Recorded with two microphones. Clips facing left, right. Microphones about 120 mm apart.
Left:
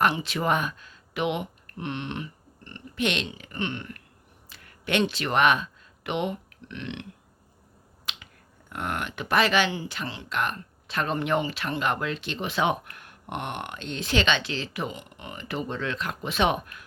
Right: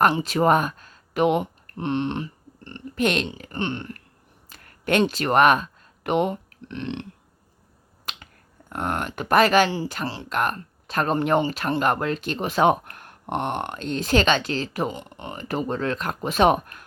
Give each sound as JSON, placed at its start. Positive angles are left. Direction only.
{"t": 0.0, "sound": "speech", "side_deg": -40}
{"t": 4.4, "sound": "a sound", "side_deg": -45}
{"t": 8.1, "sound": "finger snapping", "side_deg": -45}
{"t": 8.7, "sound": "speech", "side_deg": -40}